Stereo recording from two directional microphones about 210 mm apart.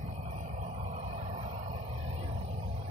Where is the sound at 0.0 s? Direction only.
35° right (ahead or behind).